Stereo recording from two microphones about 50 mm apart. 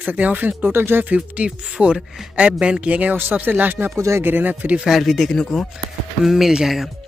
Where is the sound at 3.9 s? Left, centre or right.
Right.